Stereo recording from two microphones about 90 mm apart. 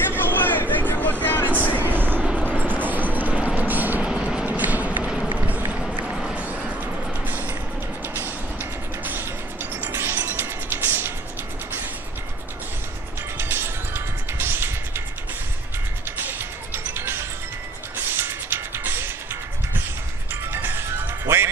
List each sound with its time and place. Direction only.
0.2 s a sound: 20° left (ahead or behind)
1.2 s vehicle: 20° left (ahead or behind)
1.8 s vehicle: 20° right (ahead or behind)
2.4 s a sound: 15° left (ahead or behind)
2.9 s music: 20° right (ahead or behind)
4.1 s vehicle: 10° right (ahead or behind)
6.0 s music: 5° right (ahead or behind)
9.9 s music: 25° right (ahead or behind)
13.4 s music: 25° right (ahead or behind)
16.2 s music: 25° right (ahead or behind)
20.5 s music: 25° right (ahead or behind)